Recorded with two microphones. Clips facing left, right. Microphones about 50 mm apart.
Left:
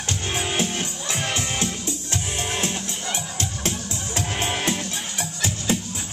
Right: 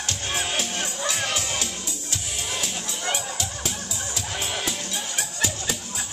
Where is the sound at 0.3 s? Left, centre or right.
Centre.